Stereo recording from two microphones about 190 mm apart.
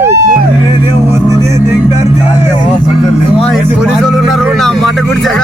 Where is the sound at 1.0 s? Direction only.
10° right (ahead or behind).